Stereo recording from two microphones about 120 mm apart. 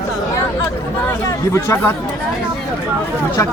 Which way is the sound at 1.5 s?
25° left (ahead or behind).